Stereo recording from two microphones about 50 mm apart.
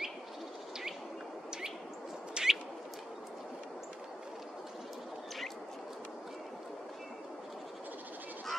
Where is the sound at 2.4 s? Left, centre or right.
Centre.